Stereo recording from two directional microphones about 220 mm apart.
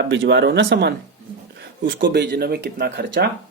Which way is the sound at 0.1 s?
55° right (ahead or behind).